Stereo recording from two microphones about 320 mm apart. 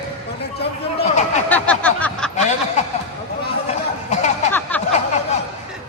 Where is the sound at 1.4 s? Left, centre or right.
Centre.